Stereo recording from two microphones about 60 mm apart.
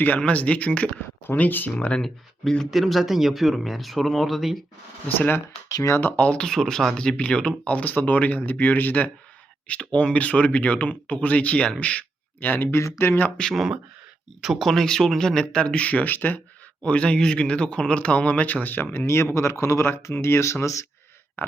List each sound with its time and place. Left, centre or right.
0.2 s speech: left
1.3 s speech: left
2.0 s speech: centre
5.6 s speech: left
6.0 s speech: left
14.4 s speech: centre
14.7 s speech: centre; by 16.4 s left
16.8 s speech: centre; by 20.8 s left